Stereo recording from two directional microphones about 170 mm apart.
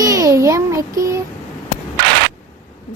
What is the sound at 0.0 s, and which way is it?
Child singing, 20° right (ahead or behind).